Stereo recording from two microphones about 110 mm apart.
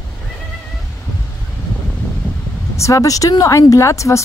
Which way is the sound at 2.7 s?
30° left (ahead or behind).